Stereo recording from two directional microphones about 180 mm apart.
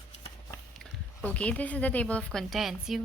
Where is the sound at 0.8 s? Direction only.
5° left (ahead or behind).